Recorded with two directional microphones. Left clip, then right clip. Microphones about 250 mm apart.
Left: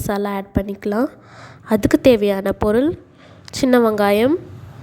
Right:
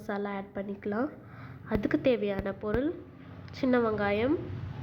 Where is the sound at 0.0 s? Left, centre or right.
Left.